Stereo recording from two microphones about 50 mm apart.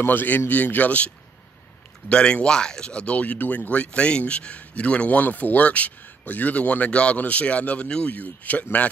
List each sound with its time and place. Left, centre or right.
0.0 s speech: left
2.0 s speech: centre